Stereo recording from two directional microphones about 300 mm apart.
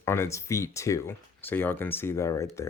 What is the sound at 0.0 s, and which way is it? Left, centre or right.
Speech, centre.